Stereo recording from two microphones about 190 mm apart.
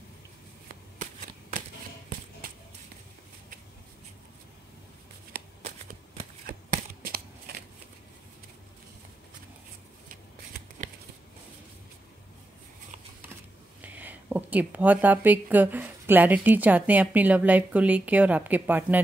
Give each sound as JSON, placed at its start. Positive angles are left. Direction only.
{"t": 2.4, "sound": "a sound", "side_deg": -50}
{"t": 5.3, "sound": "shuffling cards", "side_deg": -55}
{"t": 13.7, "sound": "speech", "side_deg": -10}